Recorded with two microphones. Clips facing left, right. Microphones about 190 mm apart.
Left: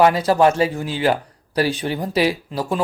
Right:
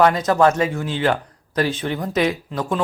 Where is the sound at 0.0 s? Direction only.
30° left (ahead or behind).